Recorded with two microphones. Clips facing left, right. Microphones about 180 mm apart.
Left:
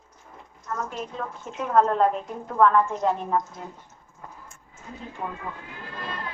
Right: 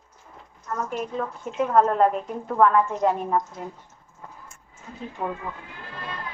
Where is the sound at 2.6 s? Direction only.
5° right (ahead or behind).